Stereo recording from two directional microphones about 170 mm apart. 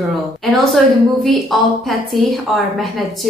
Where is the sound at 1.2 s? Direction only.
Centre (ahead or behind).